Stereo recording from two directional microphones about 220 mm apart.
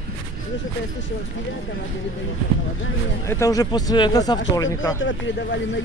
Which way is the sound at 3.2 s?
15° left (ahead or behind).